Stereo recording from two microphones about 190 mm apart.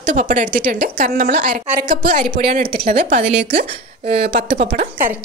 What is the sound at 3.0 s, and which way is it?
Speech, 35° right (ahead or behind).